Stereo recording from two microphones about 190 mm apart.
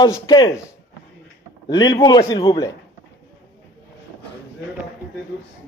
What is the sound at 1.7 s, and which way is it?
Speech, 20° left (ahead or behind).